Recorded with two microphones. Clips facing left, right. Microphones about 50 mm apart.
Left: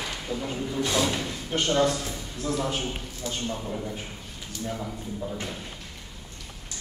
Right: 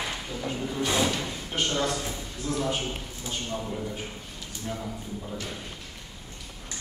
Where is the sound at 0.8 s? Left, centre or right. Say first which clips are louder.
Left 1 dB; centre.